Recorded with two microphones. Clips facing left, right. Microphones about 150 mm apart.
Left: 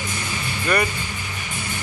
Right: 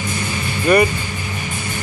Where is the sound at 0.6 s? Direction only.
15° right (ahead or behind).